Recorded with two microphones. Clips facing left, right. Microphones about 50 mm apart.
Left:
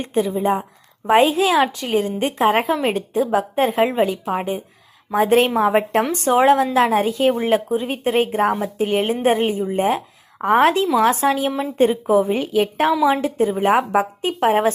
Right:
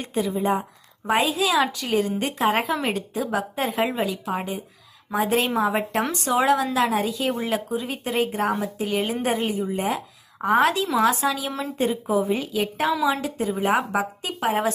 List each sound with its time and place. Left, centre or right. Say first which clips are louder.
0.0 s a woman's voice: left 5 dB; left
1.0 s a woman's voice: left 7 dB; left
5.1 s a woman's voice: left 6 dB; left